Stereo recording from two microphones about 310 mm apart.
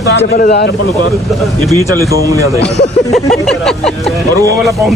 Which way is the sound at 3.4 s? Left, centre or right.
Centre.